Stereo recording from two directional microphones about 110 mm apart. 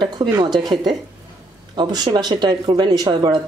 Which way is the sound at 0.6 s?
40° right (ahead or behind).